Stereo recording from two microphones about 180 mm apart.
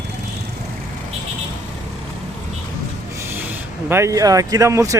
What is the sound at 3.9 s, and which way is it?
Speech, 15° right (ahead or behind).